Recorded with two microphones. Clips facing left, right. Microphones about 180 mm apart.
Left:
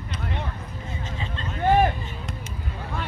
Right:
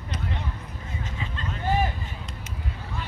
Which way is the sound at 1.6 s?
60° left (ahead or behind).